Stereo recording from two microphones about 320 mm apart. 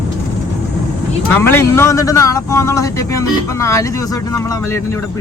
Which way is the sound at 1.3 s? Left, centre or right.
Centre.